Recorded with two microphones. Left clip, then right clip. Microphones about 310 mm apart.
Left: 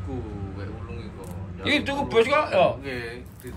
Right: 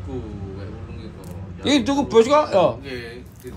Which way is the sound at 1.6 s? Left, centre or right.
Centre.